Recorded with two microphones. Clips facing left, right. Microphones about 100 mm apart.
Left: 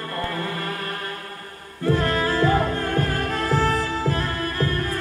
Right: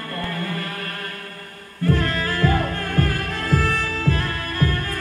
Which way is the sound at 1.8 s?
20° left (ahead or behind).